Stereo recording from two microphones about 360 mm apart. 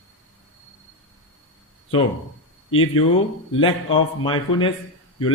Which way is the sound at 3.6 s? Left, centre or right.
Centre.